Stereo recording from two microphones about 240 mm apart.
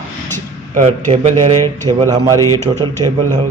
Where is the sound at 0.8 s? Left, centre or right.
Right.